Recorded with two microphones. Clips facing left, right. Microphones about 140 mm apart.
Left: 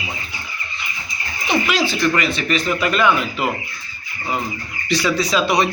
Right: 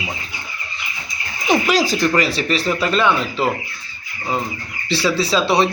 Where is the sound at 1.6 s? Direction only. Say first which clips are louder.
Right 2 dB; 40° right (ahead or behind).